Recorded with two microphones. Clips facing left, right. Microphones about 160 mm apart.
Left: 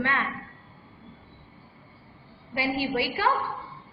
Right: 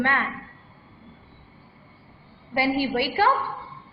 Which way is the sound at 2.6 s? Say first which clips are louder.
Right 4 dB; 60° right (ahead or behind).